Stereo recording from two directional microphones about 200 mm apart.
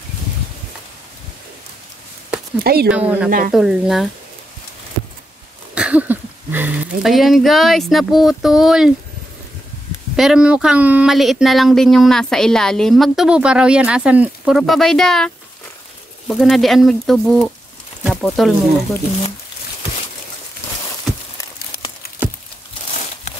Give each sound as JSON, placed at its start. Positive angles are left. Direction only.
{"t": 2.6, "sound": "speech", "side_deg": -50}
{"t": 2.9, "sound": "a woman's voice", "side_deg": -5}
{"t": 3.3, "sound": "speech", "side_deg": -45}
{"t": 3.5, "sound": "speech", "side_deg": 0}
{"t": 5.8, "sound": "speech", "side_deg": -5}
{"t": 10.1, "sound": "speech", "side_deg": -5}